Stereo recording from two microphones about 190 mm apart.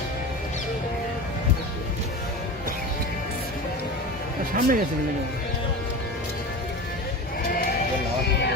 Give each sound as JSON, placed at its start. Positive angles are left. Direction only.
{"t": 4.5, "sound": "speech", "side_deg": -45}